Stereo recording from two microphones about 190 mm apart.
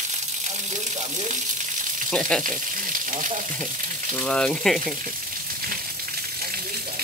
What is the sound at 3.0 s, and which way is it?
Speech, 45° right (ahead or behind).